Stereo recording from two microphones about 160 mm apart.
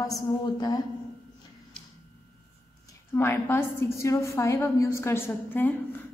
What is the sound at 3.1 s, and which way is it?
A woman's voice, 15° left (ahead or behind).